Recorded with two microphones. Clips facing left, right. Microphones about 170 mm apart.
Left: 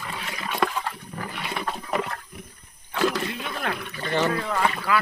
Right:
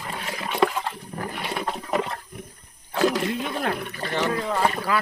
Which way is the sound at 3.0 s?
20° right (ahead or behind).